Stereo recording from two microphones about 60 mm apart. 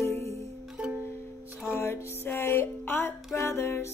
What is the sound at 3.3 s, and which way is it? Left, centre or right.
Music, left.